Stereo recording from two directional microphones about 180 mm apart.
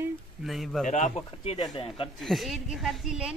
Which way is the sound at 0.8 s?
40° left (ahead or behind).